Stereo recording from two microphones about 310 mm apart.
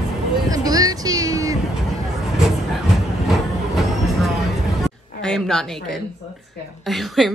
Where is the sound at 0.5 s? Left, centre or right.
Centre.